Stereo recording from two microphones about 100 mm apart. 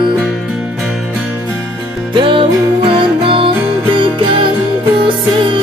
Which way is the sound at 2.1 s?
60° right (ahead or behind).